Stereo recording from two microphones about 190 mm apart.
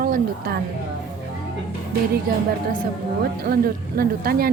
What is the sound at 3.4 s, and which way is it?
Speech, 55° right (ahead or behind).